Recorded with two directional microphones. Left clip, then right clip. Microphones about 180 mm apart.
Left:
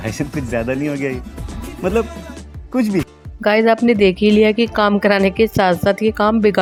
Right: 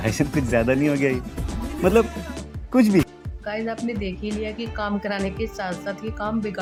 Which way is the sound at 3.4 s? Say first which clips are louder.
Left 15 dB; 55° left (ahead or behind).